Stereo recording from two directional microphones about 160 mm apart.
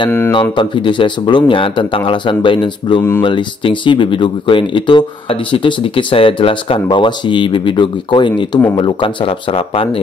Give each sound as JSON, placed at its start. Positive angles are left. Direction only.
{"t": 0.3, "sound": "speech", "side_deg": 30}